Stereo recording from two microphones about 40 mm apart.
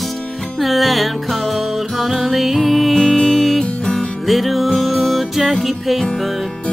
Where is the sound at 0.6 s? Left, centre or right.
Centre.